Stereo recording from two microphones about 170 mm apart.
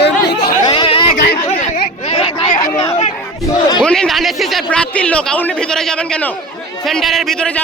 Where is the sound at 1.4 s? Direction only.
50° left (ahead or behind).